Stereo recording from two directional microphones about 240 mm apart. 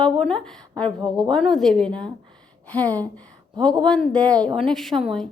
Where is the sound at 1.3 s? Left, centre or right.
Centre.